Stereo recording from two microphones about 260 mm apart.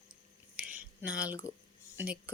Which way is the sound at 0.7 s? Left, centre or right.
Right.